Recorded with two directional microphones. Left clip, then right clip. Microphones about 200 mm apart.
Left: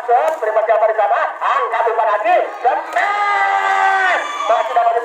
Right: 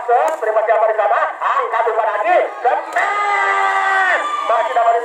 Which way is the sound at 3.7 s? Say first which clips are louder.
Left 1 dB; 15° left (ahead or behind).